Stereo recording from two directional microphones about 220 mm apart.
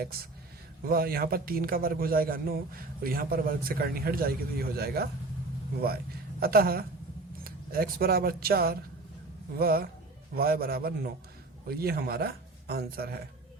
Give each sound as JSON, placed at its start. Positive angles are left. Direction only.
{"t": 0.9, "sound": "a man's voice", "side_deg": -45}
{"t": 6.4, "sound": "a man's voice", "side_deg": -45}